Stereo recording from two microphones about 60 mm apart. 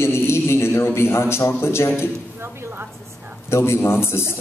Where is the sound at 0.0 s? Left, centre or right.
Left.